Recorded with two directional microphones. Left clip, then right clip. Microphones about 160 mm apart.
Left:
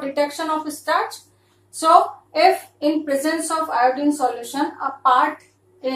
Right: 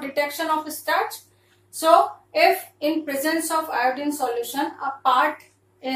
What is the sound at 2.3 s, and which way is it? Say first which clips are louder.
A woman's voice: left 2 dB; 10° left (ahead or behind).